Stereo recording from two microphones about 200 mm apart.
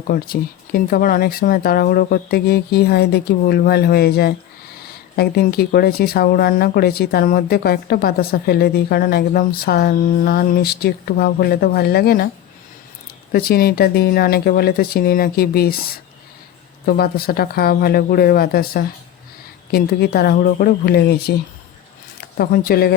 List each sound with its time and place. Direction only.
0.1 s speech: 45° left (ahead or behind)
13.3 s speech: 50° left (ahead or behind)
22.4 s speech: 50° left (ahead or behind)